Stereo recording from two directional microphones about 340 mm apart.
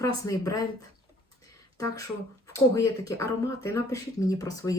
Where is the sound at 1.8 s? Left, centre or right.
Centre.